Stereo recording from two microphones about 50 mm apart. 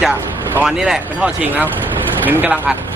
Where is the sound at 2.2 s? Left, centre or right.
Right.